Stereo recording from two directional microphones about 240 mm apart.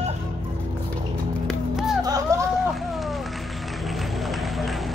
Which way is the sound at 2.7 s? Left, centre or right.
Centre.